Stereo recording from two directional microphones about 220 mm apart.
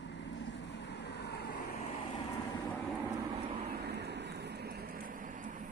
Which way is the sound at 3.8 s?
50° right (ahead or behind).